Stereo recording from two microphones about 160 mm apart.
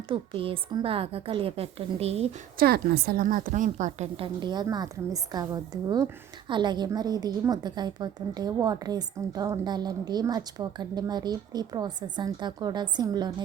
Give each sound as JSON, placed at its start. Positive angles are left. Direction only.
{"t": 0.1, "sound": "a woman's voice", "side_deg": -35}
{"t": 2.6, "sound": "a woman's voice", "side_deg": -70}
{"t": 4.4, "sound": "a woman's voice", "side_deg": -25}